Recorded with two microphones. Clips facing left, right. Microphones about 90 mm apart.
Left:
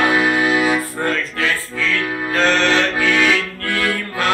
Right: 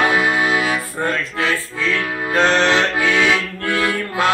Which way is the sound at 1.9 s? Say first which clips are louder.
Right 1 dB; 20° right (ahead or behind).